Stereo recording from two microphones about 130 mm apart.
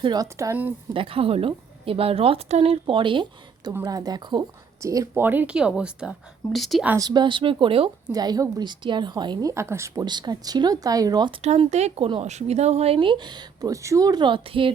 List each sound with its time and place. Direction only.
0.0 s speech: 30° right (ahead or behind)
0.9 s a woman's voice: 45° right (ahead or behind)
3.7 s a woman's voice: 25° right (ahead or behind); by 6.8 s centre (ahead or behind)
7.0 s speech: 35° right (ahead or behind)
8.1 s speech: 30° right (ahead or behind)
10.0 s speech: 35° right (ahead or behind)
11.4 s speech: 55° right (ahead or behind)